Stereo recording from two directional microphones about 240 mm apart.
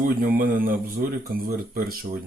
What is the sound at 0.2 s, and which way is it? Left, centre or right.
Speech, right.